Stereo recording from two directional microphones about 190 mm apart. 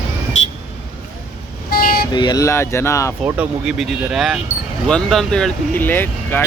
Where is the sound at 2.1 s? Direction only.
20° left (ahead or behind).